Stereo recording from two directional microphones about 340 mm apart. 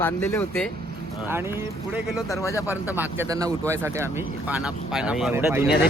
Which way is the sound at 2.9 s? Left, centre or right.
Centre.